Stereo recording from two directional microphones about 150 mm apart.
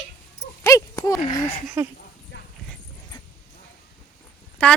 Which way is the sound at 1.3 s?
25° left (ahead or behind).